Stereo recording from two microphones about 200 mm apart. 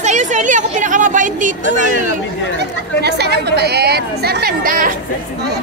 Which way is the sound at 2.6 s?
55° right (ahead or behind).